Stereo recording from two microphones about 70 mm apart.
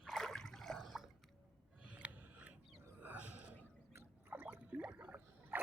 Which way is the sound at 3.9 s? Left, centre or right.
Right.